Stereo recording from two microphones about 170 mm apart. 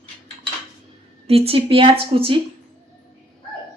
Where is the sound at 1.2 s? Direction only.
35° right (ahead or behind).